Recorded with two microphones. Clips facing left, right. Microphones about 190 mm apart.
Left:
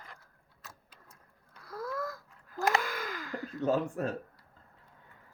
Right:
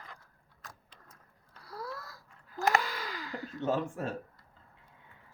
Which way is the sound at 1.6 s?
45° left (ahead or behind).